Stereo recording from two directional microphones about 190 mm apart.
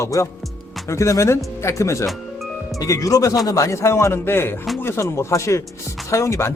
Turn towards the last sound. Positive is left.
turn(degrees=15)  # may be behind; listen again after turning